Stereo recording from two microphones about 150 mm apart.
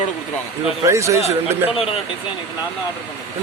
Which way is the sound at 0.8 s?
20° right (ahead or behind).